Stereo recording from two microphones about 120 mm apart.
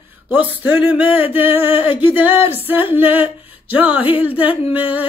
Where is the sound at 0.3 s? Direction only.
15° right (ahead or behind).